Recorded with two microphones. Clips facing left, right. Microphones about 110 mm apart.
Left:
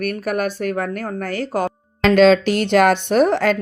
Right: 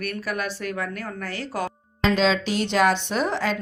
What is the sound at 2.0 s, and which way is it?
A woman's voice, 65° left (ahead or behind).